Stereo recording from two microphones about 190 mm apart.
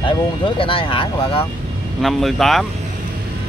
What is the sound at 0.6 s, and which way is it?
Speech, 30° left (ahead or behind).